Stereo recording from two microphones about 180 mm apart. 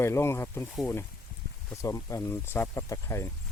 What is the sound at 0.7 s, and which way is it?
Speech, centre (ahead or behind).